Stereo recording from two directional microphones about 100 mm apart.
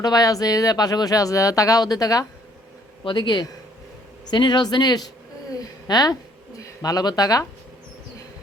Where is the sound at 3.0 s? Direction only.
50° left (ahead or behind).